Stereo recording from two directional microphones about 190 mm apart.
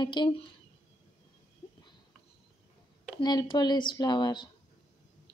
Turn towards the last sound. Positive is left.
turn(degrees=25)  # may be behind; listen again after turning